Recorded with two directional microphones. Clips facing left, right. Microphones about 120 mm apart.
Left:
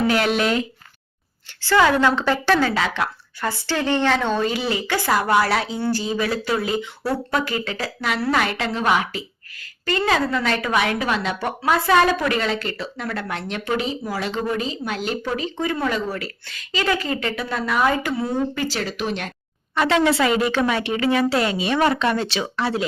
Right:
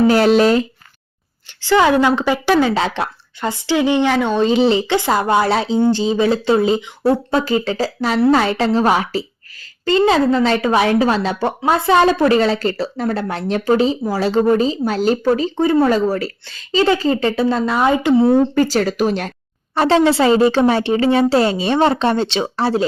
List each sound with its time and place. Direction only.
0.1 s a sound: 35° right (ahead or behind)
1.6 s a woman's voice: 20° right (ahead or behind)
2.7 s a woman's voice: 30° right (ahead or behind)
3.5 s a woman's voice: 15° right (ahead or behind)
4.4 s a woman's voice: 25° right (ahead or behind)
9.8 s a woman's voice: 25° right (ahead or behind)
18.3 s a woman's voice: 40° right (ahead or behind)